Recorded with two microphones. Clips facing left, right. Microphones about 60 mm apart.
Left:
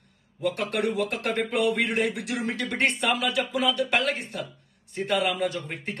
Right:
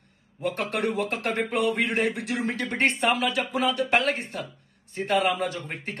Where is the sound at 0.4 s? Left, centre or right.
Right.